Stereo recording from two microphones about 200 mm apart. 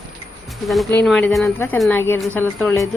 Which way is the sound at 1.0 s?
Centre (ahead or behind).